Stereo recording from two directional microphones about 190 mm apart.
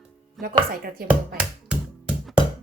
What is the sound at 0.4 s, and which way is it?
Speech, 50° right (ahead or behind).